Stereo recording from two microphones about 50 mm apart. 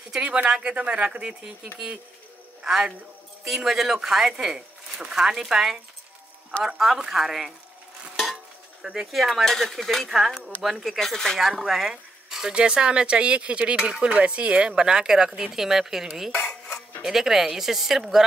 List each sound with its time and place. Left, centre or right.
0.1 s a man's voice: right
6.8 s speech: centre
9.0 s speech: centre
9.4 s speech: centre
11.0 s speech: centre
16.3 s dishes: centre
17.0 s speech: centre